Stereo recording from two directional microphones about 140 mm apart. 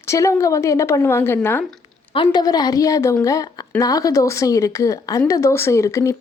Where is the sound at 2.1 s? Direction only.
30° left (ahead or behind).